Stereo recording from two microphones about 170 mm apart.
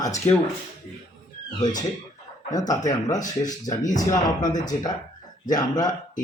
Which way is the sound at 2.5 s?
20° left (ahead or behind).